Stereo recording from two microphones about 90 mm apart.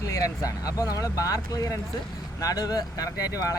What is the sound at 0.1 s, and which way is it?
Speech, 40° left (ahead or behind).